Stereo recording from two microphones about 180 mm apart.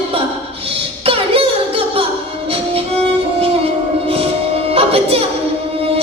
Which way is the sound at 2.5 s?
30° right (ahead or behind).